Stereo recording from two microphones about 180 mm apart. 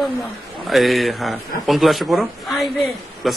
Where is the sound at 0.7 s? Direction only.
Centre (ahead or behind).